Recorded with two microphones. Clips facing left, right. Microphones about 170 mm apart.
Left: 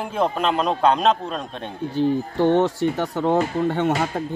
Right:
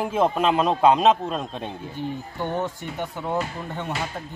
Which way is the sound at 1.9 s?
85° left.